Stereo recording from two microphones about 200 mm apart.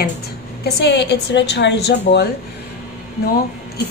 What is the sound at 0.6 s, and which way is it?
A woman's voice, 60° left (ahead or behind).